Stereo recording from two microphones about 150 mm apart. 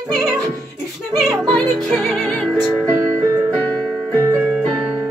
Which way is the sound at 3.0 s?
20° right (ahead or behind).